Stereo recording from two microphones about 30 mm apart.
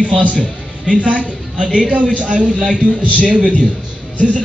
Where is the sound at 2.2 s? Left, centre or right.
Right.